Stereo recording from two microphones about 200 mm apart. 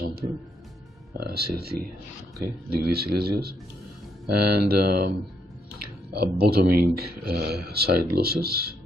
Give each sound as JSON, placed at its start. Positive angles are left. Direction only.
{"t": 1.2, "sound": "speech", "side_deg": -50}
{"t": 6.1, "sound": "speech", "side_deg": -50}